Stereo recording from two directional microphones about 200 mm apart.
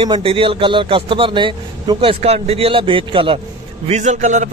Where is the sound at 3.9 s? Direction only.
35° right (ahead or behind).